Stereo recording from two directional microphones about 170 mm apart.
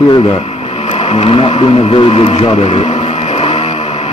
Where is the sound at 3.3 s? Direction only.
35° left (ahead or behind).